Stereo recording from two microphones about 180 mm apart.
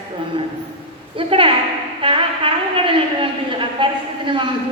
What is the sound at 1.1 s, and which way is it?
A woman's voice, 30° right (ahead or behind).